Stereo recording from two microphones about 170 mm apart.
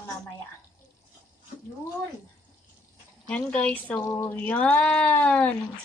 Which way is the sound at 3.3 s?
5° left (ahead or behind).